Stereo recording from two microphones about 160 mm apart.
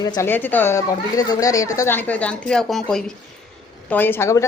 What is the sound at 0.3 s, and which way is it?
A woman's voice, 10° left (ahead or behind).